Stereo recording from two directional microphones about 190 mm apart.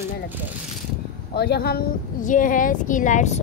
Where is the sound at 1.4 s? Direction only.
55° left (ahead or behind).